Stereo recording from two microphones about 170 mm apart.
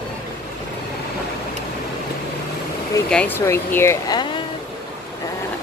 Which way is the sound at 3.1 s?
10° left (ahead or behind).